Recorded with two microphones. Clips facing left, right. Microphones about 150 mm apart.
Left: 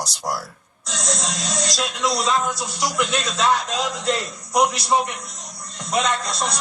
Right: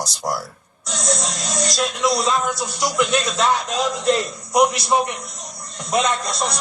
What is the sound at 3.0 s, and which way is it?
A man's voice, 10° right (ahead or behind).